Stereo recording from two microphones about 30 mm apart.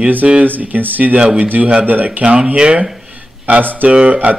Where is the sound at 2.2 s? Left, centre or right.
Right.